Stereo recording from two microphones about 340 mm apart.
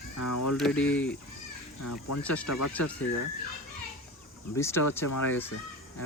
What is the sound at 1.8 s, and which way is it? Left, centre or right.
Speech, left.